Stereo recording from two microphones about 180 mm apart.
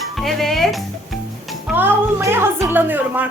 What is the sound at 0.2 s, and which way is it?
Music, centre (ahead or behind).